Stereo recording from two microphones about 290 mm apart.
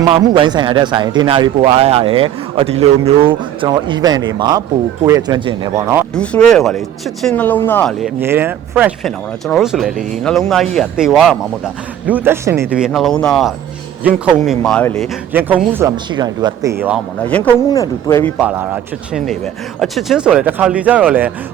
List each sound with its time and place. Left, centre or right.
0.1 s a man's voice: centre
16.8 s speech: centre
18.3 s speech: centre